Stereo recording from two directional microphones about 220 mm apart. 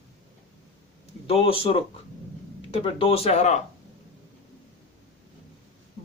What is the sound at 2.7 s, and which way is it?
Speech, 25° left (ahead or behind).